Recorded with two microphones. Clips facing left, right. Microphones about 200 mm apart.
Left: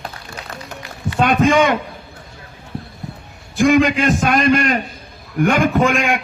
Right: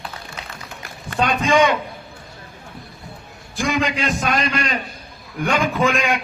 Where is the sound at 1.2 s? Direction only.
50° left (ahead or behind).